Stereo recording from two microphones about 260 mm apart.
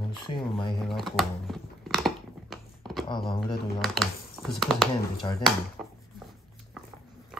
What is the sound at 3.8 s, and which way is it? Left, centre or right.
Speech, centre.